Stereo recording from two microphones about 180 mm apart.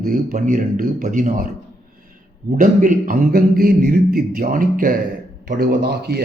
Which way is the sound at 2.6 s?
45° right (ahead or behind).